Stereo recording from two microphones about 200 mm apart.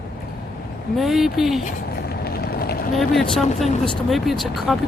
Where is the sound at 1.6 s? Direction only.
50° left (ahead or behind).